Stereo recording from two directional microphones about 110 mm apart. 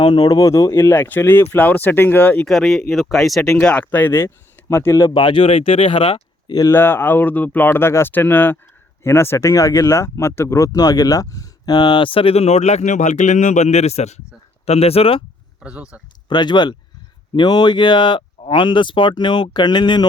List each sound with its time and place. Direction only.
0.0 s speech: 45° left (ahead or behind); by 2.5 s 15° left (ahead or behind)
2.5 s speech: centre (ahead or behind); by 6.6 s 50° left (ahead or behind)
6.7 s speech: 20° left (ahead or behind); by 14.2 s 80° left
14.6 s speech: 70° left (ahead or behind)
15.6 s speech: 10° right (ahead or behind)
16.3 s speech: 40° left (ahead or behind)